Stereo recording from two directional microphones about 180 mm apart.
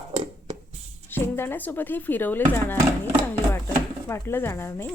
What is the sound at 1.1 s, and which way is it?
Speech, 10° left (ahead or behind).